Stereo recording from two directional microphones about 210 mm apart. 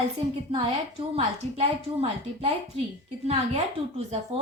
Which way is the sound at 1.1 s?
30° right (ahead or behind).